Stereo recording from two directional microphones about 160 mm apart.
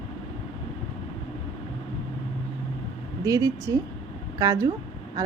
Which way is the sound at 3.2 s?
20° right (ahead or behind).